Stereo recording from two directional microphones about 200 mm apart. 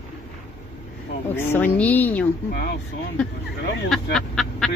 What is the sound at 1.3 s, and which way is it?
Speech, 10° left (ahead or behind).